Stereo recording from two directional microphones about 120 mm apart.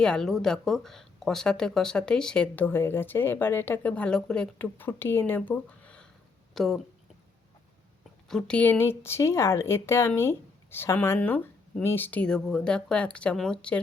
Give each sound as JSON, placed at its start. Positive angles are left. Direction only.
{"t": 0.0, "sound": "speech", "side_deg": 5}
{"t": 8.3, "sound": "speech", "side_deg": 5}